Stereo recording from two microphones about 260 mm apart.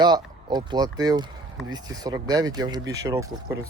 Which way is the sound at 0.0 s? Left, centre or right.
Centre.